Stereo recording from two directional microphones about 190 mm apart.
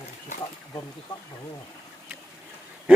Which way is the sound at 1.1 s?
20° left (ahead or behind).